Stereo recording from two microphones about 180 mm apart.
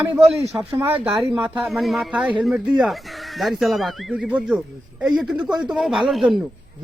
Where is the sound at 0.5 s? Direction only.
15° right (ahead or behind).